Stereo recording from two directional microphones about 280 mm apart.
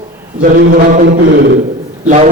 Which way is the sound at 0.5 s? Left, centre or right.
Right.